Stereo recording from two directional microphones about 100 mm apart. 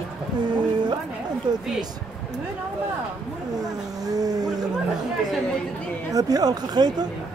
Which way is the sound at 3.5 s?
40° right (ahead or behind).